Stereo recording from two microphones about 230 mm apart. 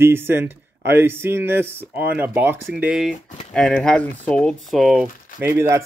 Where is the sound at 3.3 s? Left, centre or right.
Left.